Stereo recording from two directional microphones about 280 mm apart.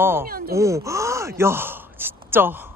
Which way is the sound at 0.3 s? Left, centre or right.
Right.